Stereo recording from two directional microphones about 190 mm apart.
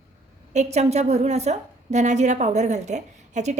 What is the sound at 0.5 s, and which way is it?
A woman's voice, 35° right (ahead or behind).